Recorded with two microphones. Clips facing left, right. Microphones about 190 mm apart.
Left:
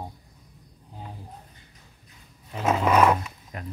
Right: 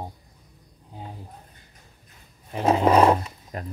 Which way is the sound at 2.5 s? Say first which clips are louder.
Right 3 dB; 30° right (ahead or behind).